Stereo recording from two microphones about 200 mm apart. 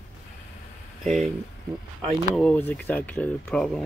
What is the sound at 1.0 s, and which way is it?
Speech, 35° right (ahead or behind).